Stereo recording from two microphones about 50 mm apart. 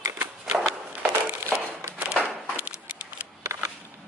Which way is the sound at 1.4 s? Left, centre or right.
Right.